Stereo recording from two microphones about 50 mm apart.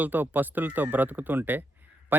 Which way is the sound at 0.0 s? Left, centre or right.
Right.